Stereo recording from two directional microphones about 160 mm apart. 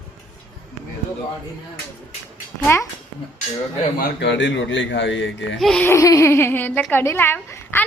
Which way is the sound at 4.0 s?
90° left.